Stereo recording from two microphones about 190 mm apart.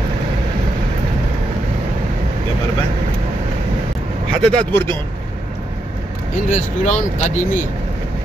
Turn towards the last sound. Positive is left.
turn(degrees=40)  # may be behind; listen again after turning